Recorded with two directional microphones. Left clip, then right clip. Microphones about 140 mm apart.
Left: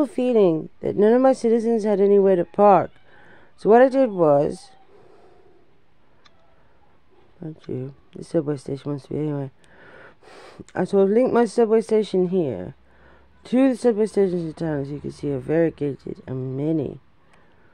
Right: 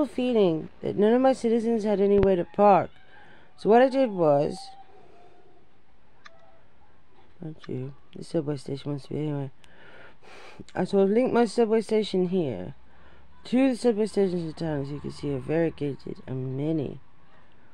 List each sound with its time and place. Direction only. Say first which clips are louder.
0.0 s speech: left 5 dB; 35° left (ahead or behind)
7.3 s speech: left 5 dB; 30° left (ahead or behind)